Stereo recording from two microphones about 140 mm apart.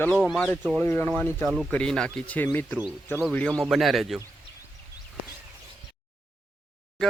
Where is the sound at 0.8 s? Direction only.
15° left (ahead or behind).